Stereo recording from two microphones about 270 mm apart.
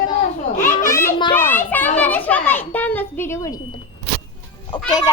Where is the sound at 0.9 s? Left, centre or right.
Centre.